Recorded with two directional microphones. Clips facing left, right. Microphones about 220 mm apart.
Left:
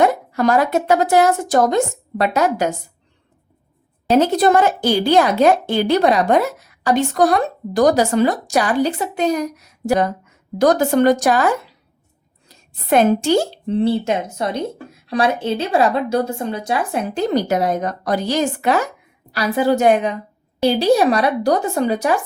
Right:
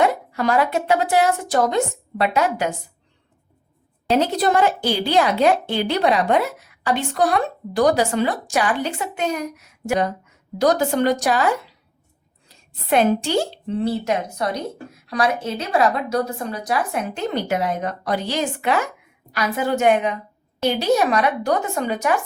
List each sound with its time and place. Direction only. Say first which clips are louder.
0.0 s a woman's voice: left 4 dB; 45° left (ahead or behind)
4.1 s a woman's voice: left 5 dB; 45° left (ahead or behind)
10.6 s a woman's voice: left 4 dB; 50° left (ahead or behind)
12.5 s speech: left 3 dB; 45° left (ahead or behind)
13.7 s speech: left 4 dB; 30° left (ahead or behind)